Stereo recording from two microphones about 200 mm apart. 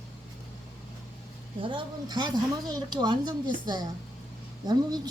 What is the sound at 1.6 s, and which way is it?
A woman's voice, 25° right (ahead or behind).